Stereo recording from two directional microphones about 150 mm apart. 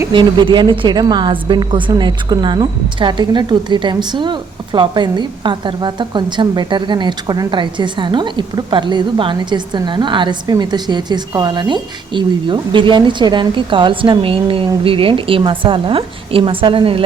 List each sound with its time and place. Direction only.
0.1 s a woman's voice: 30° right (ahead or behind)